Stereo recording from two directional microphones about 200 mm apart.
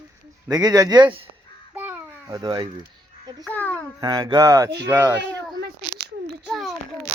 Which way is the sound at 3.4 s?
10° left (ahead or behind).